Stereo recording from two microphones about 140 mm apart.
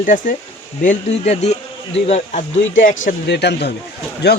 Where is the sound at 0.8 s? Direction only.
55° left (ahead or behind).